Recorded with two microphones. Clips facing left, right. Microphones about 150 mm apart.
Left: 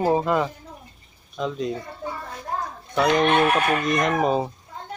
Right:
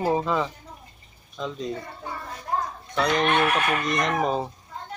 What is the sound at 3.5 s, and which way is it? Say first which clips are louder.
Chicken: left 3 dB; 35° left (ahead or behind).